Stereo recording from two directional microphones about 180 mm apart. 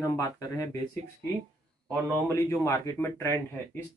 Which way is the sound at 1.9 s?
15° left (ahead or behind).